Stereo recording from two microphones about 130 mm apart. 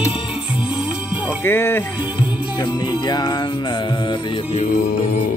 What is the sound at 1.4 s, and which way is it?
Speech, 15° left (ahead or behind).